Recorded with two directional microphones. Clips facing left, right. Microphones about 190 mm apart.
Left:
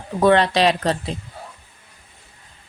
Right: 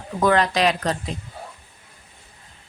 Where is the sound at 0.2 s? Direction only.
30° left (ahead or behind).